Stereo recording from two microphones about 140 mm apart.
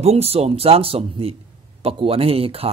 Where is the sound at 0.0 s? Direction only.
45° right (ahead or behind).